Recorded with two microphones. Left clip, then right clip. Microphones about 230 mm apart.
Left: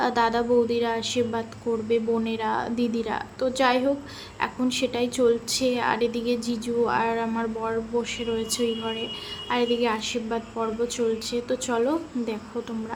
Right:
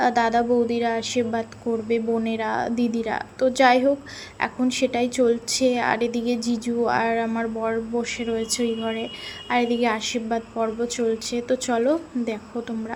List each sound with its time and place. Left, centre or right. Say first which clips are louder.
0.0 s a woman's voice: right 3 dB; centre